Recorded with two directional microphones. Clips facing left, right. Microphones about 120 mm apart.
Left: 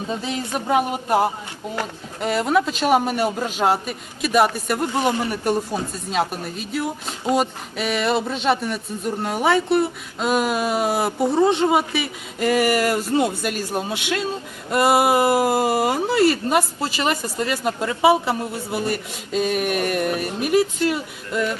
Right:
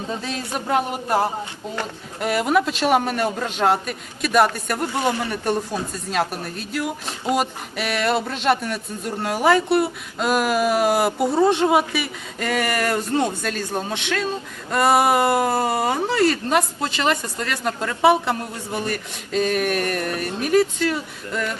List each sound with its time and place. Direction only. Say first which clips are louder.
0.3 s speech: left 2 dB; 10° left (ahead or behind)
2.2 s speech: even; 5° right (ahead or behind)
4.8 s speech: left 1 dB; 20° left (ahead or behind)
6.1 s speech: left 1 dB; centre (ahead or behind)
12.4 s speech: left 4 dB; 10° left (ahead or behind)